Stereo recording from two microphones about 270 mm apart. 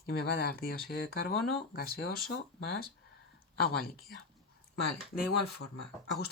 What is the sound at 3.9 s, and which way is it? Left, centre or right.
Speech, centre.